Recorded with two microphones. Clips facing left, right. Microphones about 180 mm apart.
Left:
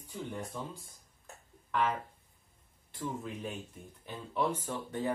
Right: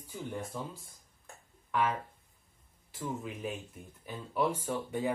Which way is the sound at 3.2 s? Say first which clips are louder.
Right 1 dB; 5° right (ahead or behind).